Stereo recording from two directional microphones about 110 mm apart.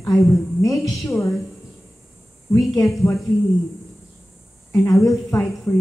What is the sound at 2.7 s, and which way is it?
Speech, 25° left (ahead or behind).